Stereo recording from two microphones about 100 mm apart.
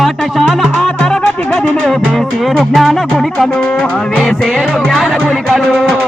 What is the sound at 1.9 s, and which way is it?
Music, centre (ahead or behind).